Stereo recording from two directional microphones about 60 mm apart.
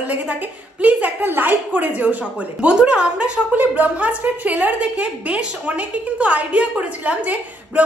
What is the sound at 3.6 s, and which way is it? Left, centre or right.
A woman's voice, right.